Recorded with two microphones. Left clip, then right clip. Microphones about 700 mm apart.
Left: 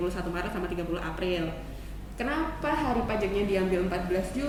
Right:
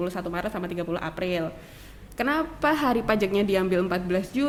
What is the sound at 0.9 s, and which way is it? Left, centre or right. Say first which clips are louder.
A woman's voice: right 3 dB; right.